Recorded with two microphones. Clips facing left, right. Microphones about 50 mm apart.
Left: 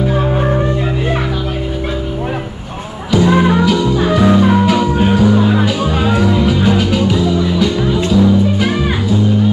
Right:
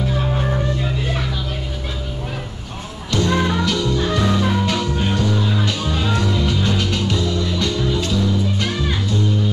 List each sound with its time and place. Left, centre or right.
0.1 s music: left
3.1 s music: centre
5.4 s music: left
5.7 s music: centre